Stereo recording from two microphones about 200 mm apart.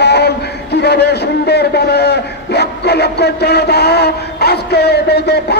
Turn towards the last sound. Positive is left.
turn(degrees=55)  # may be behind; listen again after turning